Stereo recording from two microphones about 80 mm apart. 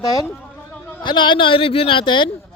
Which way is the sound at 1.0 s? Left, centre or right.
Left.